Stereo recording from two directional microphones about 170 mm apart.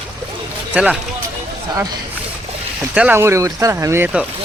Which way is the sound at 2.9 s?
10° right (ahead or behind).